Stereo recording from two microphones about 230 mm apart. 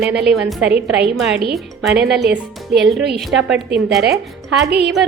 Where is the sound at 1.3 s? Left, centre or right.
Right.